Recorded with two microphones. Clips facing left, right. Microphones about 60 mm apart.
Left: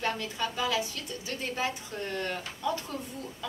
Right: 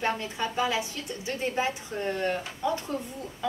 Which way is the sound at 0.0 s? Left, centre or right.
Right.